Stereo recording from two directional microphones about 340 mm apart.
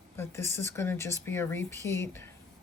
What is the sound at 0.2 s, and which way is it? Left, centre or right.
Speech, centre.